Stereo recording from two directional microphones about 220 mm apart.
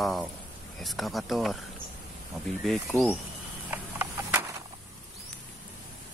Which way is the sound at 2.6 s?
Centre (ahead or behind).